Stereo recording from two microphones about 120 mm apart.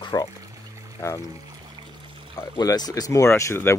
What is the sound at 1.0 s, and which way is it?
Speech, 20° left (ahead or behind).